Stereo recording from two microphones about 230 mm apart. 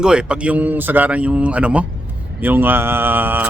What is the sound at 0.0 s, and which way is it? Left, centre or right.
A man's voice, centre.